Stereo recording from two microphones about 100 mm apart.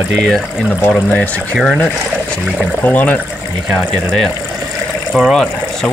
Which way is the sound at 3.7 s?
Centre (ahead or behind).